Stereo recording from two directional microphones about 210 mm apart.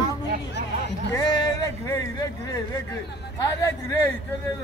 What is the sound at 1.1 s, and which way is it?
Speech, 20° left (ahead or behind).